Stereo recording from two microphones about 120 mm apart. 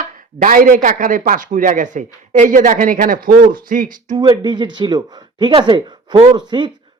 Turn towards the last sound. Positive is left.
turn(degrees=-40)  # may be behind; listen again after turning